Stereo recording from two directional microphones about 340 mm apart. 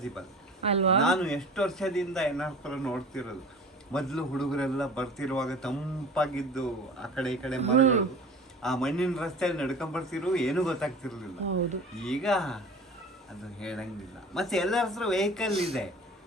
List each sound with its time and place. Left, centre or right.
0.6 s speech: centre
1.0 s a man's voice: centre
7.6 s a man's voice: centre
8.6 s a man's voice: centre